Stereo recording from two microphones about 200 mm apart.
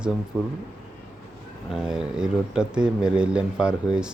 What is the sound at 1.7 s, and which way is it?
Speech, 5° right (ahead or behind).